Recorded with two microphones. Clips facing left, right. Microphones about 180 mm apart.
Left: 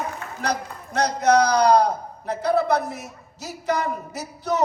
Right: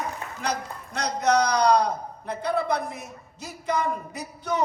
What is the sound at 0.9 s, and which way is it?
Speech, 40° left (ahead or behind).